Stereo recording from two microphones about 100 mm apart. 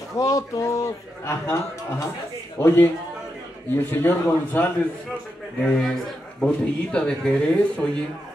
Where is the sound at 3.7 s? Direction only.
20° left (ahead or behind).